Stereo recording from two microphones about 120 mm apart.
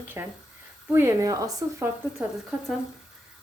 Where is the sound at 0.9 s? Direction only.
25° right (ahead or behind).